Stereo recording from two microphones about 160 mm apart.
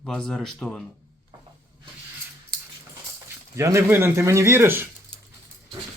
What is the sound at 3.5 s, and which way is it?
A man's voice, 20° right (ahead or behind).